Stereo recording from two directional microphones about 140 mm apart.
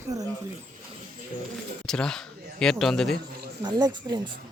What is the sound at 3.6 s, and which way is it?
Speech, 30° right (ahead or behind).